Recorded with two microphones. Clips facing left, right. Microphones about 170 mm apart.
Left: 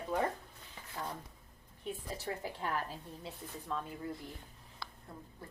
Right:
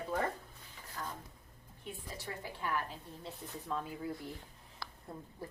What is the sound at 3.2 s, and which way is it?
Speech, centre (ahead or behind).